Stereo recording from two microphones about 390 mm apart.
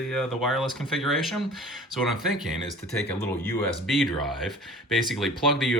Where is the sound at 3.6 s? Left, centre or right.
Centre.